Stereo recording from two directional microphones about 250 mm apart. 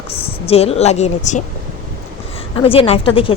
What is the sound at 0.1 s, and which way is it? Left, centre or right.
Speech, left.